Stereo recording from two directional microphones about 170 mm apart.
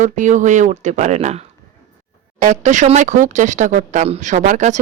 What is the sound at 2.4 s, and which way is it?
Speech, 45° right (ahead or behind).